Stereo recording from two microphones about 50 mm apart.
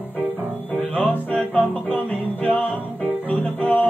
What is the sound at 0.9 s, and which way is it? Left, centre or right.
Music, left.